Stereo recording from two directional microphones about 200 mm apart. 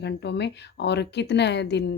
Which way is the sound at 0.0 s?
60° left (ahead or behind).